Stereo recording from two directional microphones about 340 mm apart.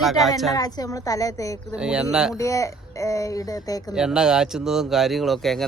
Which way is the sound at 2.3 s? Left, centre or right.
Centre.